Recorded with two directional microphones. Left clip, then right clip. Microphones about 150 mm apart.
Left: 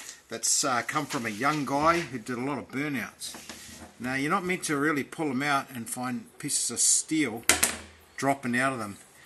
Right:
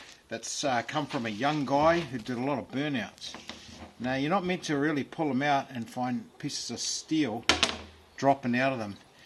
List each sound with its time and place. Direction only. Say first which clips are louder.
0.3 s speech: left 2 dB; 5° right (ahead or behind)
1.9 s speech: left 1 dB; 20° right (ahead or behind)
2.8 s speech: even; centre (ahead or behind)
4.1 s speech: left 1 dB; 20° right (ahead or behind)
7.5 s a sound: right 1 dB; centre (ahead or behind)
8.2 s speech: right 1 dB; 20° right (ahead or behind)